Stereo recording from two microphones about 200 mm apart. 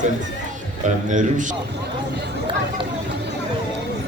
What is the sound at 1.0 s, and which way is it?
Speech, 40° right (ahead or behind).